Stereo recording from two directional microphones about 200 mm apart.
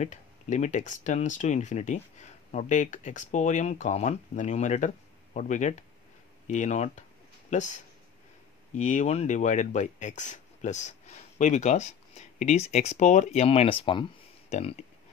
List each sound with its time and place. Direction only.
0.0 s speech: 35° left (ahead or behind)
6.4 s a sound: 35° left (ahead or behind)
8.7 s speech: 35° left (ahead or behind)